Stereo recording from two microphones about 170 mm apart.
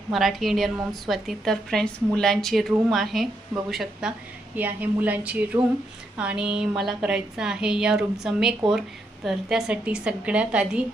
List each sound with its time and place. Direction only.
0.1 s a woman's voice: centre (ahead or behind)